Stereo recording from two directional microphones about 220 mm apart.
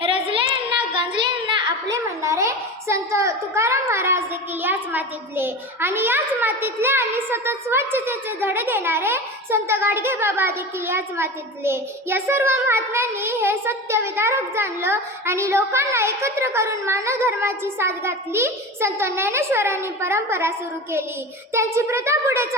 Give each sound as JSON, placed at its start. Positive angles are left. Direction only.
{"t": 0.0, "sound": "a sound", "side_deg": -25}
{"t": 1.9, "sound": "a woman's voice", "side_deg": -15}
{"t": 21.5, "sound": "a child's voice", "side_deg": -10}